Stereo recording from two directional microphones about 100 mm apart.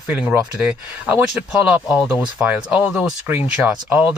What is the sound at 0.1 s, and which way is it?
Speech, 10° right (ahead or behind).